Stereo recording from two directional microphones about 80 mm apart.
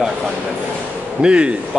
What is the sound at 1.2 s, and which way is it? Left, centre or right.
Speech, centre.